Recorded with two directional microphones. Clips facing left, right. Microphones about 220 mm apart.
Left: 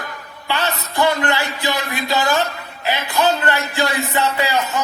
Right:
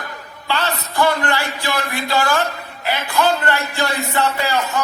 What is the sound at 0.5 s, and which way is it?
A man's voice, 20° left (ahead or behind).